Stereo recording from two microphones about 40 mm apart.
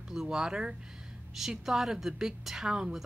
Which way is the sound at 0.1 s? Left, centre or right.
Centre.